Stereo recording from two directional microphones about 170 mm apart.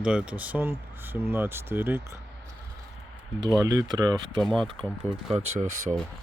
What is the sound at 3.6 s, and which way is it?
Speech, 20° right (ahead or behind).